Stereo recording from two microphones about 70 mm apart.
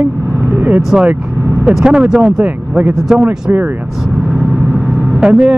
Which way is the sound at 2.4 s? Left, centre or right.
Right.